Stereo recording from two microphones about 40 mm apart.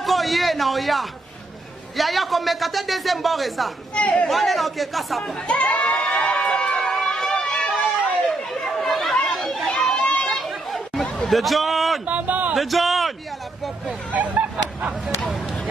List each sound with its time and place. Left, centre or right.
0.0 s a man's voice: centre
3.9 s a man's voice: left
4.3 s a man's voice: centre
5.5 s a man's voice: left
5.9 s crowd: left
6.8 s a sound: centre
8.6 s chatter: centre
9.9 s chatter: left
10.3 s chatter: centre
11.2 s a sound: centre
12.1 s a sound: right
12.5 s speech: centre
14.1 s speech: right